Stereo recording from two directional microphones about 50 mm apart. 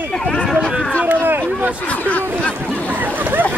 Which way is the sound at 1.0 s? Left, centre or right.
Right.